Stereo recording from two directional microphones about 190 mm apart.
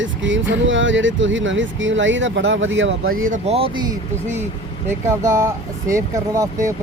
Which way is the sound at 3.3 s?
30° right (ahead or behind).